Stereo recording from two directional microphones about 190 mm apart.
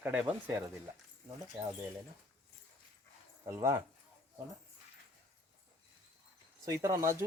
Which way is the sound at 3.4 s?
15° right (ahead or behind).